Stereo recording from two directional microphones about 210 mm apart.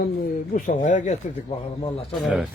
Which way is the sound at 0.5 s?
35° left (ahead or behind).